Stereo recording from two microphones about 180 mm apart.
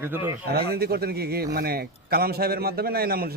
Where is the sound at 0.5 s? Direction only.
60° right (ahead or behind).